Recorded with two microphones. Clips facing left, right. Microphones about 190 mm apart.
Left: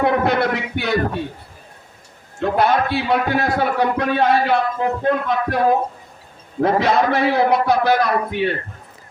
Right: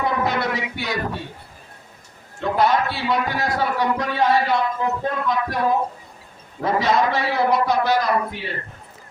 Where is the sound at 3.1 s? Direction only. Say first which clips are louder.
Left 3 dB; 60° left (ahead or behind).